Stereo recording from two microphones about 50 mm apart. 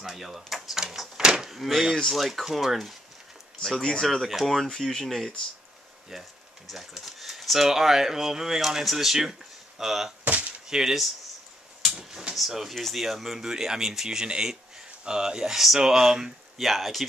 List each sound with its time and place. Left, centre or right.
0.0 s door: centre
2.0 s speech: centre
3.6 s speech: centre
6.7 s speech: centre
10.2 s a sound: right
10.7 s speech: centre
12.0 s drawer open or close: centre
12.4 s speech: centre